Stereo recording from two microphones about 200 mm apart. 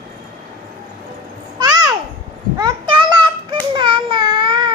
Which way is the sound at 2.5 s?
20° right (ahead or behind).